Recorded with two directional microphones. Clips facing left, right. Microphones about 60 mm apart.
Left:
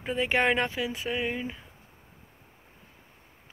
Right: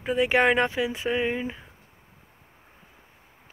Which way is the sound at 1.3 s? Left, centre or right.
Centre.